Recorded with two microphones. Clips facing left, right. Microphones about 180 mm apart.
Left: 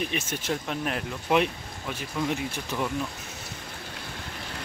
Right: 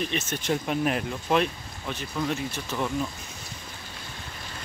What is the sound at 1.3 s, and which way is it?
Speech, 10° left (ahead or behind).